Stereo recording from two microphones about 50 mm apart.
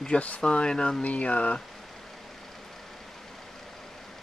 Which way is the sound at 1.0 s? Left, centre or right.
Left.